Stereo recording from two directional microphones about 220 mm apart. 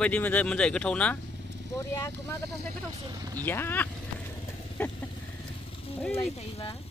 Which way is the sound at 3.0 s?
15° right (ahead or behind).